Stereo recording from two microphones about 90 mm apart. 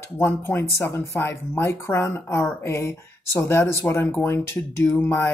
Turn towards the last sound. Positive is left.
turn(degrees=25)  # may be behind; listen again after turning